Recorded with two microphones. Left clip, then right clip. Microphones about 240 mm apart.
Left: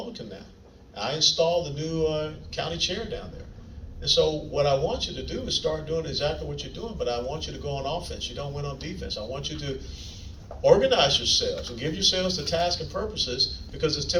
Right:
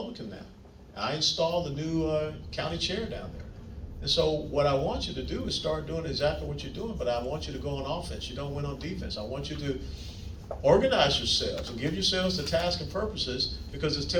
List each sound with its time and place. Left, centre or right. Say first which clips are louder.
0.9 s a man's voice: left 5 dB; left
4.0 s a man's voice: left 4 dB; left
10.6 s a man's voice: left 3 dB; left